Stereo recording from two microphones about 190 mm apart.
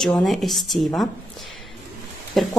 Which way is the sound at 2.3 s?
Centre (ahead or behind).